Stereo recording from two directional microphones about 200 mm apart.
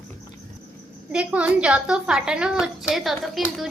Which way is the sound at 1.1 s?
5° right (ahead or behind).